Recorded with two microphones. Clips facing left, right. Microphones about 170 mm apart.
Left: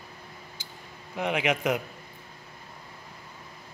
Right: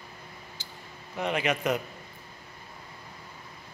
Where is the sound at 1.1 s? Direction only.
15° left (ahead or behind).